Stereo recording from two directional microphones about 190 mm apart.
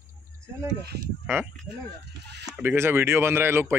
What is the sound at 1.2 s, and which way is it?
Speech, 10° right (ahead or behind).